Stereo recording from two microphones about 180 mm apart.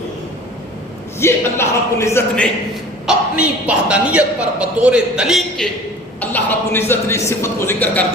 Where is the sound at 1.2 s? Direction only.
15° left (ahead or behind).